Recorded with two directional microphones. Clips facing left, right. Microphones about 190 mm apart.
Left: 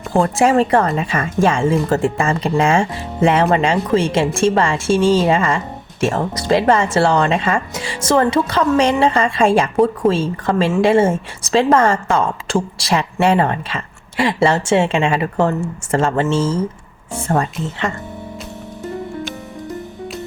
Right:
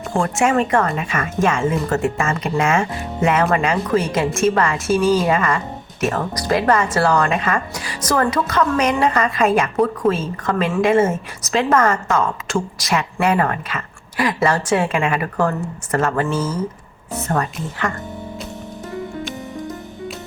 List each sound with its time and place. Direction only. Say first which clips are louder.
0.1 s speech: left 4 dB; 35° left (ahead or behind)